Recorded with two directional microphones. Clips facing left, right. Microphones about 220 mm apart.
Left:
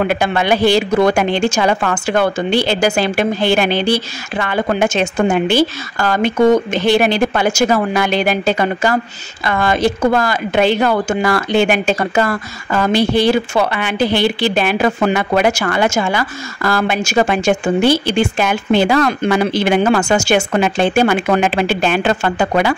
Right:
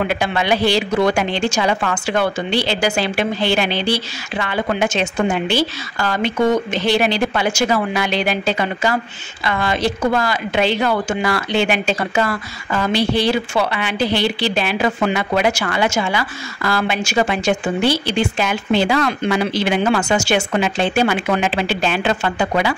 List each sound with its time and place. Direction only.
0.0 s a woman's voice: 50° left (ahead or behind)